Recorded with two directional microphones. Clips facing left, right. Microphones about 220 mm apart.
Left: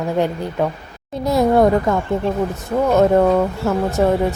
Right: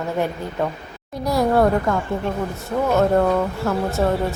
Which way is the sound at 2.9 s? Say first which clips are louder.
Left 4 dB; 20° left (ahead or behind).